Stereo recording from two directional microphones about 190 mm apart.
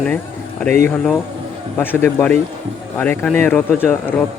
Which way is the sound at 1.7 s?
10° left (ahead or behind).